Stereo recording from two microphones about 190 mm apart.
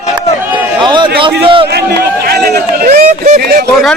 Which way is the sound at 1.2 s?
25° right (ahead or behind).